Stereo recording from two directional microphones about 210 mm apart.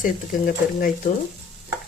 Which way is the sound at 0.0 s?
40° left (ahead or behind).